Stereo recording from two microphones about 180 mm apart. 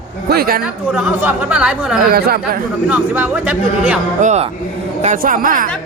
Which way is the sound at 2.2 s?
60° right (ahead or behind).